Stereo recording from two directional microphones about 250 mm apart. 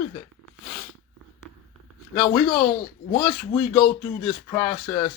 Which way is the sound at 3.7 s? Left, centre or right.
Centre.